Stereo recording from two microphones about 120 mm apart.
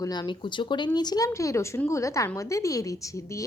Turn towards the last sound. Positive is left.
turn(degrees=25)  # may be behind; listen again after turning